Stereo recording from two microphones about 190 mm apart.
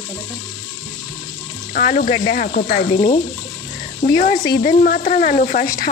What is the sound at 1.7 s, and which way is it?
Speech, 45° left (ahead or behind).